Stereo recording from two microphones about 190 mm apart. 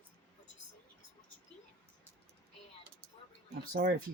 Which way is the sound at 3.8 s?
55° right (ahead or behind).